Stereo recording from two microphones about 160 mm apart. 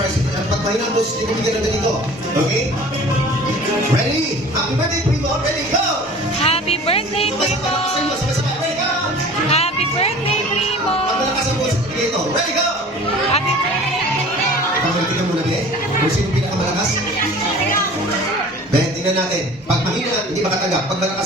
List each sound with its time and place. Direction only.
6.4 s music: 40° left (ahead or behind)
9.5 s music: 40° left (ahead or behind)